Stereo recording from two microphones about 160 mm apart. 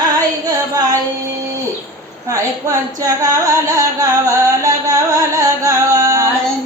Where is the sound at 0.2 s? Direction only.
25° right (ahead or behind).